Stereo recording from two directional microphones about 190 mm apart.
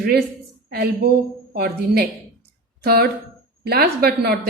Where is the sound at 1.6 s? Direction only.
55° right (ahead or behind).